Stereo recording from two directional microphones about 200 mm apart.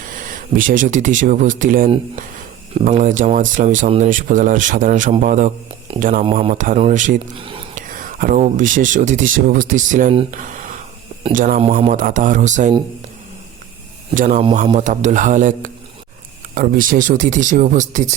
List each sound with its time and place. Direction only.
0.0 s speech: 40° right (ahead or behind)
7.3 s whispering: 25° right (ahead or behind)
7.9 s speech: 45° right (ahead or behind)
14.2 s speech: 40° right (ahead or behind)